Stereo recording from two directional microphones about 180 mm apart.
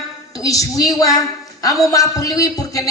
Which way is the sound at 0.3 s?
20° left (ahead or behind).